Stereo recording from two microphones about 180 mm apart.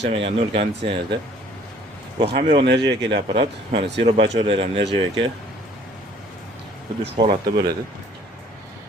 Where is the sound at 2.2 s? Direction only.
60° right (ahead or behind).